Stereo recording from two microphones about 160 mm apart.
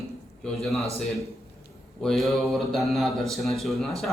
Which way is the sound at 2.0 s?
Centre (ahead or behind).